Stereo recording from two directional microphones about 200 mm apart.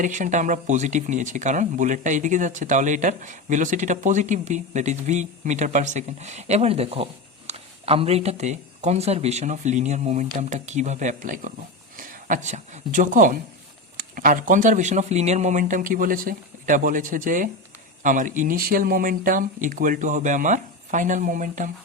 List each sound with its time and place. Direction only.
0.0 s speech: 40° right (ahead or behind)